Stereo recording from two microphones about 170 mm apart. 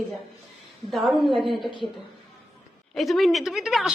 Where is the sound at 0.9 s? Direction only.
Centre (ahead or behind).